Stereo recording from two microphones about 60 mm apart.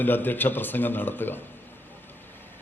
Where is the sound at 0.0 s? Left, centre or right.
Left.